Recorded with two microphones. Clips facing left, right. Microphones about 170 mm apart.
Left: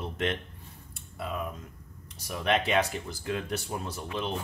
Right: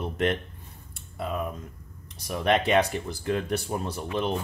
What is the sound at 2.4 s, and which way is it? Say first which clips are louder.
Speech: right 4 dB; 40° right (ahead or behind).